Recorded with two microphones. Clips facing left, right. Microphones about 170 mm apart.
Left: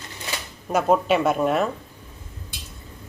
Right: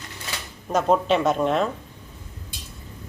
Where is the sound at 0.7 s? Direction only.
10° left (ahead or behind).